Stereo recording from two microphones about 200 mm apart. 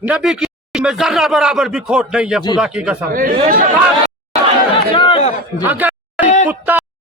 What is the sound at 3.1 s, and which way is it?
Speech, 45° right (ahead or behind).